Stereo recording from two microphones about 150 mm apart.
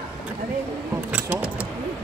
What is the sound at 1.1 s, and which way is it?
Speech, 10° right (ahead or behind).